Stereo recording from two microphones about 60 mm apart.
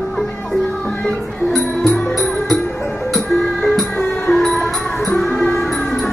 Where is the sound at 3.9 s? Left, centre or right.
Left.